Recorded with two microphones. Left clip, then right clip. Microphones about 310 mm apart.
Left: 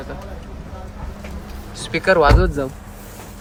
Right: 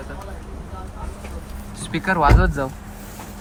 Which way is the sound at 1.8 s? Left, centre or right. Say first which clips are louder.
Left 4 dB; centre.